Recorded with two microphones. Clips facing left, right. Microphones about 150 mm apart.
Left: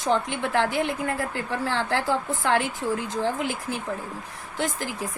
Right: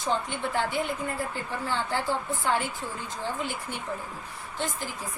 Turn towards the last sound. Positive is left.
turn(degrees=90)